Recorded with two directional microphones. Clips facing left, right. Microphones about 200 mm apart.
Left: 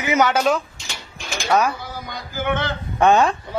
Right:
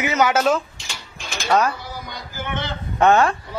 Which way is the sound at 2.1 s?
55° left (ahead or behind).